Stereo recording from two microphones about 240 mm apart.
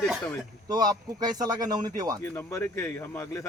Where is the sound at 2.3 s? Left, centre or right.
Centre.